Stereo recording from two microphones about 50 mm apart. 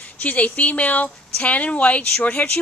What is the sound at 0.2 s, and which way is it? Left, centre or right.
Speech, left.